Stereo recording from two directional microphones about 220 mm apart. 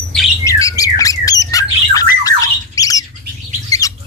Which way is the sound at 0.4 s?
15° left (ahead or behind).